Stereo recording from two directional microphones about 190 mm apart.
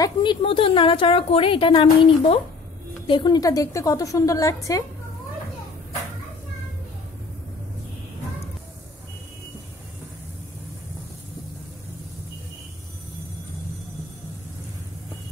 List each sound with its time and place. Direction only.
0.0 s a woman's voice: 25° left (ahead or behind)